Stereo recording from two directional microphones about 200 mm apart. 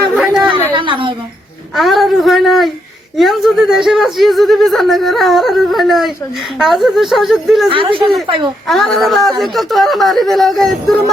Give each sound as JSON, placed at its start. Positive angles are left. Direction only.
{"t": 0.1, "sound": "chatter", "side_deg": 0}
{"t": 0.7, "sound": "a sound", "side_deg": -25}
{"t": 1.7, "sound": "a sound", "side_deg": 0}
{"t": 3.2, "sound": "speech", "side_deg": 0}
{"t": 7.7, "sound": "speech", "side_deg": -25}
{"t": 8.6, "sound": "speech", "side_deg": 0}